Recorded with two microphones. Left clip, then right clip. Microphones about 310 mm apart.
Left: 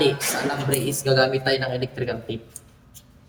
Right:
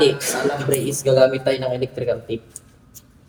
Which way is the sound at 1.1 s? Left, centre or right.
Left.